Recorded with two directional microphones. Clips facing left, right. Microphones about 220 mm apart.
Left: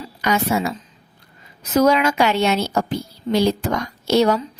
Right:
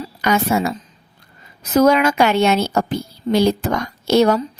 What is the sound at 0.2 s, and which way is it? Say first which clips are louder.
A woman's voice: right 2 dB; 50° right (ahead or behind).